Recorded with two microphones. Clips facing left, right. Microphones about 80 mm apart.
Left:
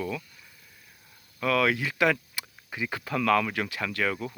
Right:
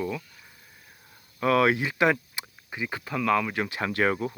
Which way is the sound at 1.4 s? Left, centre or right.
Right.